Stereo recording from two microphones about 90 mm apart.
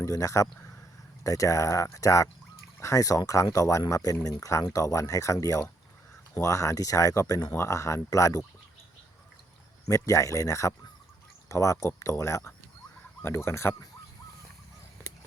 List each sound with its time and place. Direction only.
0.0 s speech: 40° left (ahead or behind)
9.9 s speech: 35° left (ahead or behind)